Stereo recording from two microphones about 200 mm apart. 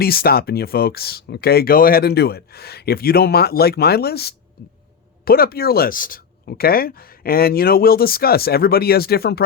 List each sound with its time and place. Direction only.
0.0 s speech: 50° left (ahead or behind)